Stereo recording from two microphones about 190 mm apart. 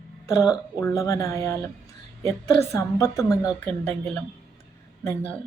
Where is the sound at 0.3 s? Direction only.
15° left (ahead or behind).